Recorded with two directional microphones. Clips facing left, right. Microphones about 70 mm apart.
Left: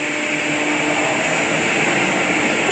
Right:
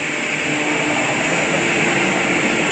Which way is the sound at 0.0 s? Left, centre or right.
Centre.